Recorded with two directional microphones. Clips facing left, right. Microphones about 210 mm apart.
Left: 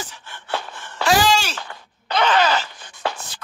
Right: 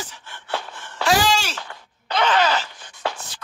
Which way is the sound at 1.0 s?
75° left (ahead or behind).